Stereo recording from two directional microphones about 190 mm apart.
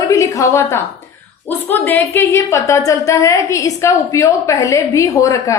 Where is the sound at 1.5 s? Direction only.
10° left (ahead or behind).